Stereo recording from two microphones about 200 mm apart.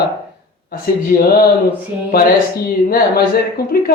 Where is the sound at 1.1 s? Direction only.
45° left (ahead or behind).